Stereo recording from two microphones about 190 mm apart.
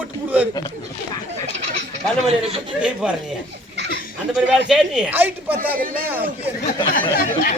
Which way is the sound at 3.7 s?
65° right (ahead or behind).